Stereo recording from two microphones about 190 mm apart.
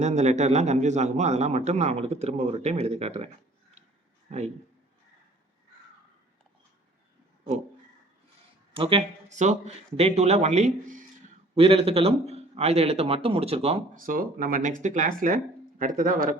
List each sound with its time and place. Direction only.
0.0 s speech: 35° right (ahead or behind)
4.3 s a man's voice: 35° right (ahead or behind)
8.7 s speech: 30° right (ahead or behind)
13.9 s speech: 45° right (ahead or behind)